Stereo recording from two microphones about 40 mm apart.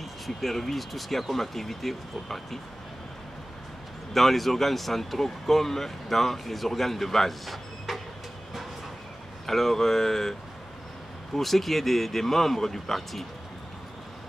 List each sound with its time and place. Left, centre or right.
0.4 s speech: centre
4.1 s speech: centre
9.5 s speech: centre
11.3 s speech: centre